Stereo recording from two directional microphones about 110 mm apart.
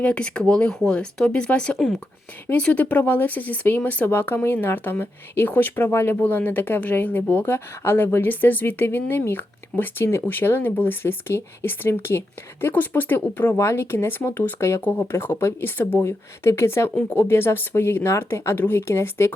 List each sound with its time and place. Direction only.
0.0 s speech: 10° left (ahead or behind)